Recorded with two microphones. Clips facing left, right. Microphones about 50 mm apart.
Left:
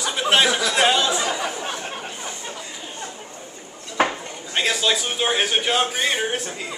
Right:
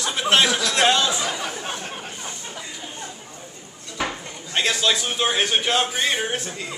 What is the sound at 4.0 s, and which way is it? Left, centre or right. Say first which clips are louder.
Dishes: left 6 dB; left.